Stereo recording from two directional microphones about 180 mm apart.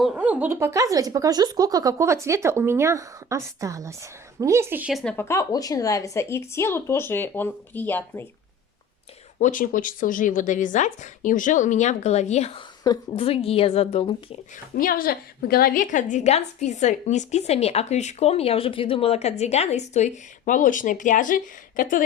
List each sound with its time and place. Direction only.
0.0 s speech: 10° right (ahead or behind)
5.1 s speech: 15° left (ahead or behind)
9.4 s speech: 45° left (ahead or behind)
12.8 s a woman's voice: 20° left (ahead or behind)
13.2 s a woman's voice: 35° left (ahead or behind)
14.8 s a woman's voice: 55° left (ahead or behind)